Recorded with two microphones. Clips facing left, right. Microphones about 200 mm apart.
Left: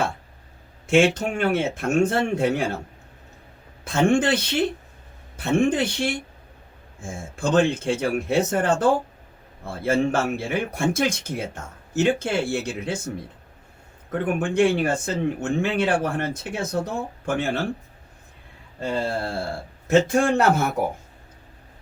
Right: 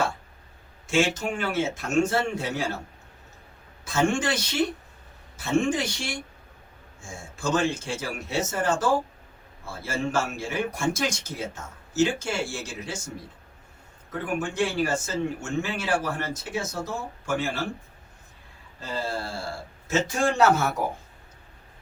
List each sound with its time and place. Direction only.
0.9 s speech: 55° left (ahead or behind)
3.8 s speech: 55° left (ahead or behind)
14.1 s speech: 55° left (ahead or behind)
18.8 s speech: 55° left (ahead or behind)